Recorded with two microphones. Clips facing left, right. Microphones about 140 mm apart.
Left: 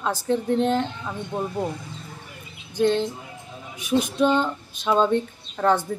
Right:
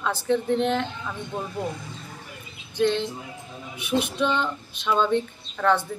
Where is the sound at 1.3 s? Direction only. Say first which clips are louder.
Left 5 dB; 20° left (ahead or behind).